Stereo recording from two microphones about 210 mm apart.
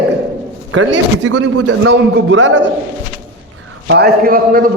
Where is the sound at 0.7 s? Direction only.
75° right (ahead or behind).